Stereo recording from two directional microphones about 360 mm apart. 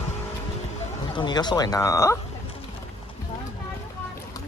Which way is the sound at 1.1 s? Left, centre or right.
Centre.